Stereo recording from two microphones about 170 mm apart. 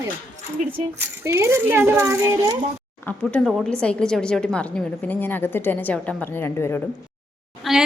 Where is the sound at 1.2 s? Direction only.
15° right (ahead or behind).